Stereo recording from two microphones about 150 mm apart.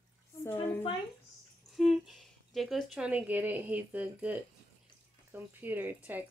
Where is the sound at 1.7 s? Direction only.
Centre (ahead or behind).